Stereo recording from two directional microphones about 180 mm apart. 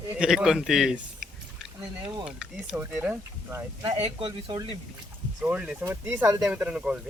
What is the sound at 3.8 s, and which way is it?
Speech, 35° right (ahead or behind).